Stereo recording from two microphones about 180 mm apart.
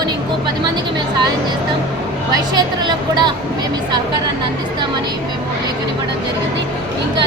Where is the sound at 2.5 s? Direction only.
25° right (ahead or behind).